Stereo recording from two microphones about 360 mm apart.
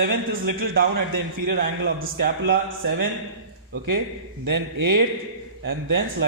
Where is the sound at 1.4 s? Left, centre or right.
Right.